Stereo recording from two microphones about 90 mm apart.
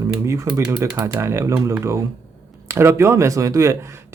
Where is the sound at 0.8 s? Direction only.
45° right (ahead or behind).